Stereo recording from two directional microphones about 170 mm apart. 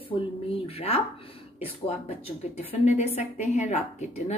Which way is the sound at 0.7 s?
35° left (ahead or behind).